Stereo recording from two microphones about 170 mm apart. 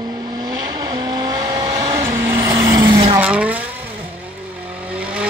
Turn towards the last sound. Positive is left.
turn(degrees=-5)  # may be behind; listen again after turning